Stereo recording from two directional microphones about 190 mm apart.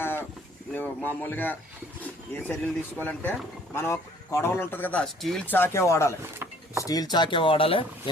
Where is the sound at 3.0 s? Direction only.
10° left (ahead or behind).